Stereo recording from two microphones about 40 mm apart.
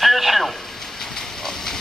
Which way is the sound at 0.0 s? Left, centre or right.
Centre.